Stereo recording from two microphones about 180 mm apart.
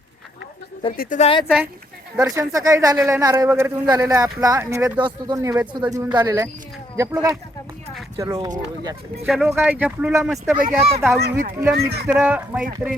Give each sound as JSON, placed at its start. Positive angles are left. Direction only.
{"t": 1.2, "sound": "speech", "side_deg": 30}
{"t": 2.1, "sound": "speech", "side_deg": -20}
{"t": 8.2, "sound": "speech", "side_deg": -20}
{"t": 9.2, "sound": "speech", "side_deg": 0}
{"t": 11.2, "sound": "speech", "side_deg": -60}
{"t": 12.0, "sound": "speech", "side_deg": -10}